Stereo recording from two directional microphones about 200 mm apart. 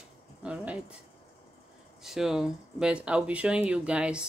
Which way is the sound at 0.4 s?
5° right (ahead or behind).